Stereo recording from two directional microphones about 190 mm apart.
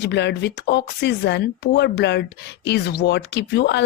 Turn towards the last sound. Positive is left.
turn(degrees=65)  # may be behind; listen again after turning